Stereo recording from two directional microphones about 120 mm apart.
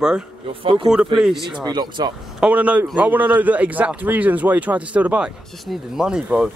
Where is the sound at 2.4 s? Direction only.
10° right (ahead or behind).